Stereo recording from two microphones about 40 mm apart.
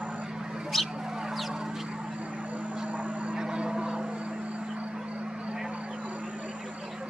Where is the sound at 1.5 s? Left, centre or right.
Centre.